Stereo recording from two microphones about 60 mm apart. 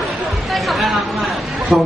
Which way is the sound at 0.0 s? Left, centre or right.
Centre.